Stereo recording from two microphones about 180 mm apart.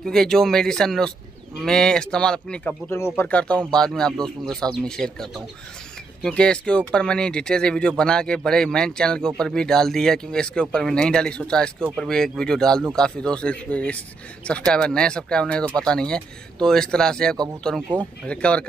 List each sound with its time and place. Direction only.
0.0 s speech: 5° left (ahead or behind)